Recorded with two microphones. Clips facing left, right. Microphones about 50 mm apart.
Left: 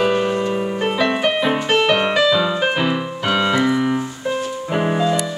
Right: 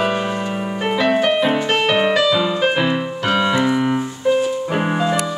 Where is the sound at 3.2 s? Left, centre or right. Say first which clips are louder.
Right 1 dB; centre.